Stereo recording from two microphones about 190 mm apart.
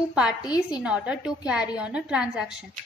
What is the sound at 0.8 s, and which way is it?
A woman's voice, 5° right (ahead or behind).